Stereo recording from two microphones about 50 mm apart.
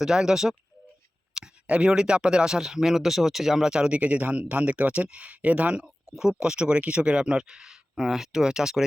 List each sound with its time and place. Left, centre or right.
0.0 s speech: centre; by 5.8 s right
5.8 s speech: centre